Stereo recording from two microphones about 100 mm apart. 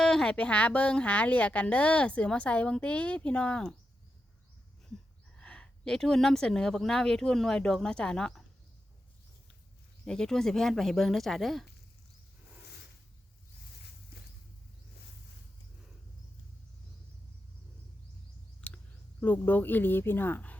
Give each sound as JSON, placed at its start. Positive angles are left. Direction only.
{"t": 0.0, "sound": "a woman's voice", "side_deg": 5}
{"t": 5.4, "sound": "speech", "side_deg": 10}
{"t": 10.1, "sound": "speech", "side_deg": 5}
{"t": 19.2, "sound": "speech", "side_deg": 15}